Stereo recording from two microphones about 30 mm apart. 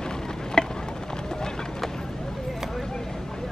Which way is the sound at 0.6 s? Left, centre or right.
Left.